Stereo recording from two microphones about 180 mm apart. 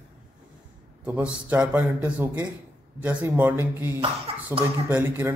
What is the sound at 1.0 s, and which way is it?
A man's voice, 10° right (ahead or behind).